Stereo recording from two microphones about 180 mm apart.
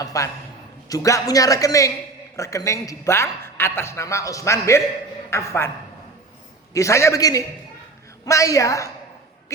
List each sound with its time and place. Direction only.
0.0 s a sound: 20° left (ahead or behind)
0.9 s a man's voice: 20° left (ahead or behind)
6.7 s a man's voice: 15° left (ahead or behind)